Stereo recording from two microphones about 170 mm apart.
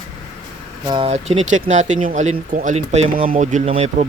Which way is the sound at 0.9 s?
30° right (ahead or behind).